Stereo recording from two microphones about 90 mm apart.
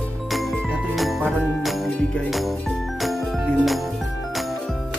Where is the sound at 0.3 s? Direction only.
Centre (ahead or behind).